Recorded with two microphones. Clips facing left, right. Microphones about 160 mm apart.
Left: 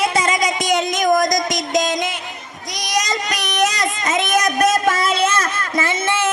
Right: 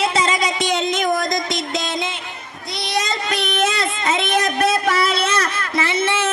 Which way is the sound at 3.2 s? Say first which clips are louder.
Even; 40° left (ahead or behind).